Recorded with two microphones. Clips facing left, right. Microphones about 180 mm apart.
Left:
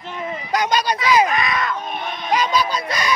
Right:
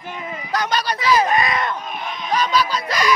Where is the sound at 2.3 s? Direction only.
20° left (ahead or behind).